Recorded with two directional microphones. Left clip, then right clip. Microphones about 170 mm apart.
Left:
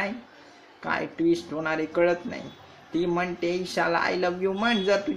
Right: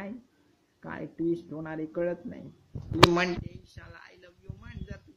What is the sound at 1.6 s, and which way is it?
Speech, 5° right (ahead or behind).